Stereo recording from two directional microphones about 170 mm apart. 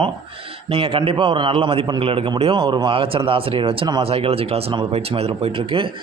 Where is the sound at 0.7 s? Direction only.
35° right (ahead or behind).